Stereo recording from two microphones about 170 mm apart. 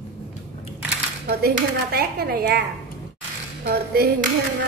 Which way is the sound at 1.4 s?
65° right (ahead or behind).